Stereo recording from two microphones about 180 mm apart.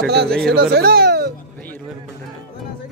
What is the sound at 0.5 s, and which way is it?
Speech, 60° right (ahead or behind).